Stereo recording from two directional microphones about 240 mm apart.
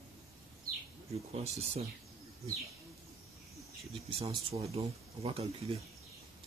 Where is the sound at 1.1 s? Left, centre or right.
Right.